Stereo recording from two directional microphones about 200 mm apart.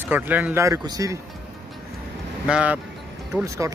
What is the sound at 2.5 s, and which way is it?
Speech, 5° right (ahead or behind).